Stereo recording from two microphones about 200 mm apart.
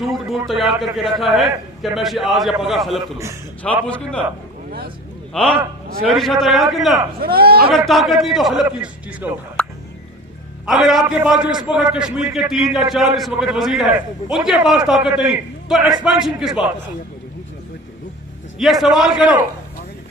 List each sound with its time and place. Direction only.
0.0 s a man's voice: centre (ahead or behind)
5.3 s a man's voice: 5° left (ahead or behind)
7.2 s speech: 50° right (ahead or behind)
7.7 s a man's voice: centre (ahead or behind)
9.6 s fowl: 5° left (ahead or behind)
10.7 s a man's voice: centre (ahead or behind)
18.6 s a man's voice: centre (ahead or behind)